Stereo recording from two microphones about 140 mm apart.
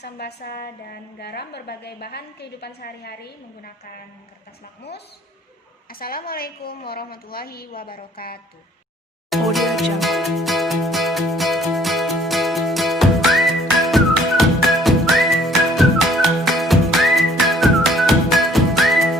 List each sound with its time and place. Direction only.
2.8 s a woman's voice: 90° left
5.9 s a woman's voice: 90° left
9.3 s music: centre (ahead or behind)